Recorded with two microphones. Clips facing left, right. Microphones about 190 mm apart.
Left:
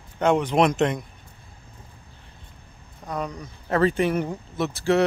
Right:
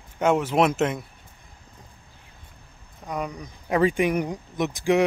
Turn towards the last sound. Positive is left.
turn(degrees=-15)  # may be behind; listen again after turning